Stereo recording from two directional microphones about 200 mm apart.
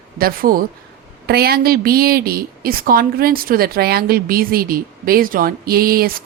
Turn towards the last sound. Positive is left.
turn(degrees=-45)  # may be behind; listen again after turning